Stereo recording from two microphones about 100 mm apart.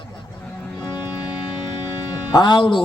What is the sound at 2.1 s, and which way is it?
Speech, 45° left (ahead or behind).